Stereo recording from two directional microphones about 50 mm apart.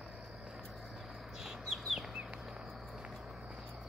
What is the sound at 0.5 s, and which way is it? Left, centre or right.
Bird, centre.